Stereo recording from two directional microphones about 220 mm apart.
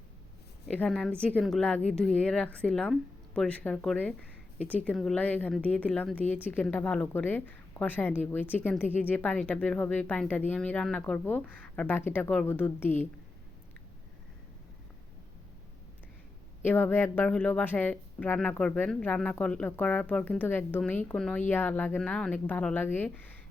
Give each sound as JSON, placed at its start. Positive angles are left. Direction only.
{"t": 0.7, "sound": "a woman's voice", "side_deg": 5}
{"t": 16.6, "sound": "a woman's voice", "side_deg": 10}